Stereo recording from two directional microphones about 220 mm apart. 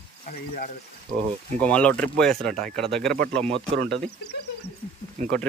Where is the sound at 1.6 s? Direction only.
5° left (ahead or behind).